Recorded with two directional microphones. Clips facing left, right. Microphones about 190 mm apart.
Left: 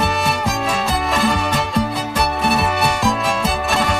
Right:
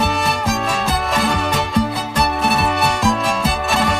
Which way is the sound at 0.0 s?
Centre (ahead or behind).